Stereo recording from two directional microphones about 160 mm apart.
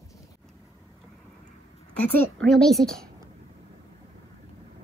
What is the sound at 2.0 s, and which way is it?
A woman's voice, 10° left (ahead or behind).